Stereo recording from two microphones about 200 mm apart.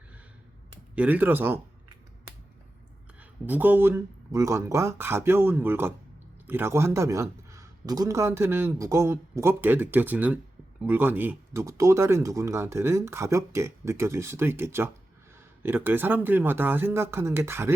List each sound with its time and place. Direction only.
0.9 s a man's voice: 10° right (ahead or behind)
3.2 s a man's voice: 10° right (ahead or behind)